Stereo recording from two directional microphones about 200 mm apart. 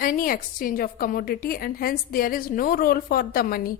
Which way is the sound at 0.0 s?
45° left (ahead or behind).